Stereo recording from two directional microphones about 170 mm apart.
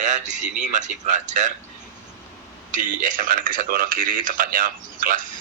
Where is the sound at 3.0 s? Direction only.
55° right (ahead or behind).